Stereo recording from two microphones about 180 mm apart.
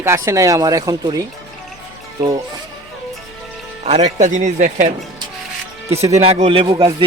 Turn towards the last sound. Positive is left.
turn(degrees=-30)  # may be behind; listen again after turning